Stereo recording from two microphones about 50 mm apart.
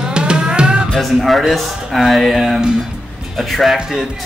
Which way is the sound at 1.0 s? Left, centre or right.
Centre.